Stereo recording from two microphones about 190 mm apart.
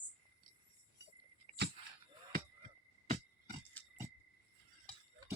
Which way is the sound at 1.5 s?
40° right (ahead or behind).